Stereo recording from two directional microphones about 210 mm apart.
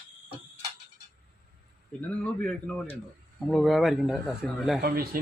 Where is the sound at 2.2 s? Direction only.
5° left (ahead or behind).